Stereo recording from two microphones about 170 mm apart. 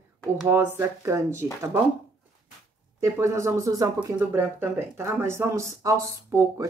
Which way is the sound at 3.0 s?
15° right (ahead or behind).